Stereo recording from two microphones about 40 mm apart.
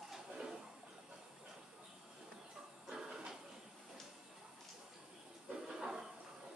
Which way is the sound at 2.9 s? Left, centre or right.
Centre.